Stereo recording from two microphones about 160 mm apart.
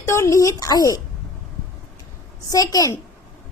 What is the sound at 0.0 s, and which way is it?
A woman's voice, 20° left (ahead or behind).